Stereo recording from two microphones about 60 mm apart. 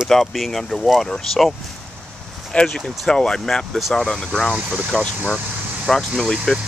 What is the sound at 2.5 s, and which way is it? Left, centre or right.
Speech, centre.